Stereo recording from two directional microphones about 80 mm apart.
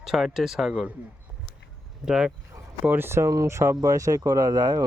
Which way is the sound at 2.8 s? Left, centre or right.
Right.